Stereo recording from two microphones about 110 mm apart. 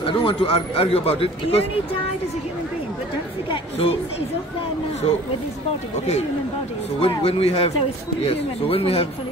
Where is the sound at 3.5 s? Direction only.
60° left (ahead or behind).